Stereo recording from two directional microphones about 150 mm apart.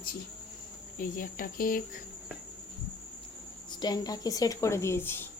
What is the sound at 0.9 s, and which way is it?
Speech, 65° left (ahead or behind).